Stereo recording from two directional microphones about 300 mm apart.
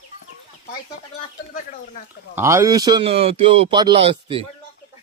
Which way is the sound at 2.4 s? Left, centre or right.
Centre.